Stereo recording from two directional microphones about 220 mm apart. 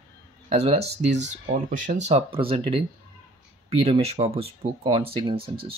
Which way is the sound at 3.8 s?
30° right (ahead or behind).